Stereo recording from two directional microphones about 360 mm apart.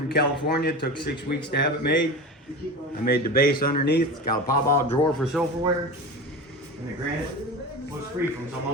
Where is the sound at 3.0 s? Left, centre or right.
Left.